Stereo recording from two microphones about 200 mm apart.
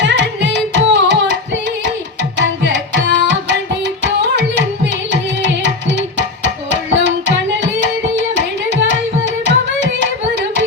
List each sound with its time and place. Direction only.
0.0 s carnatic music: 65° right (ahead or behind)
2.4 s tabla: 60° right (ahead or behind)
4.0 s music: 60° right (ahead or behind)
5.1 s tabla: 60° right (ahead or behind)